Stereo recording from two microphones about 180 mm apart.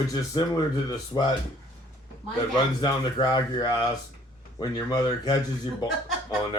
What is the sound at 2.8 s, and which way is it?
Speech, 25° left (ahead or behind).